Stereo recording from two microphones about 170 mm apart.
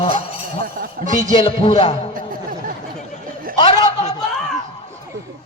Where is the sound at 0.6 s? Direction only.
55° right (ahead or behind).